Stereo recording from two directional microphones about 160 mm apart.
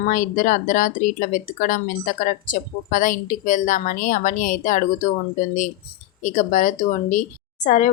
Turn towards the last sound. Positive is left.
turn(degrees=50)  # may be behind; listen again after turning